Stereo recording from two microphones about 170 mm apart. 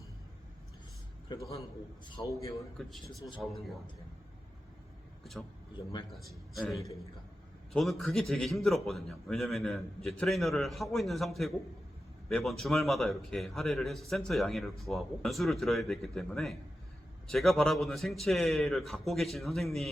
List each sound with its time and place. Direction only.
1.3 s a man's voice: 20° left (ahead or behind)
2.7 s a man's voice: centre (ahead or behind)
6.1 s a man's voice: centre (ahead or behind)